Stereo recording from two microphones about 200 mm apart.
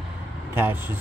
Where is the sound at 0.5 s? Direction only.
10° right (ahead or behind).